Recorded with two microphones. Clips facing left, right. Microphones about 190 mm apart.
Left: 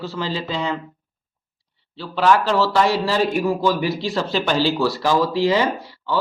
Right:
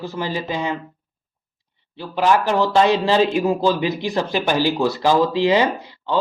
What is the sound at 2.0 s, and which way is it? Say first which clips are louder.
Speech: even; 15° right (ahead or behind).